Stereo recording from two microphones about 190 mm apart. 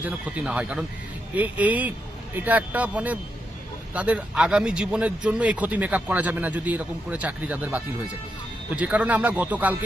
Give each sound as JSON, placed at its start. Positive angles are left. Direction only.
{"t": 0.0, "sound": "speech", "side_deg": -5}